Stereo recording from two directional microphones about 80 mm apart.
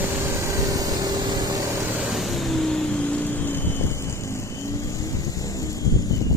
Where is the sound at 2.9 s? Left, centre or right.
Centre.